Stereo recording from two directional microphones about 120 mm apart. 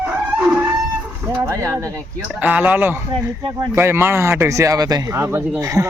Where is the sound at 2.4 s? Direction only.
10° right (ahead or behind); by 5.9 s 30° right (ahead or behind).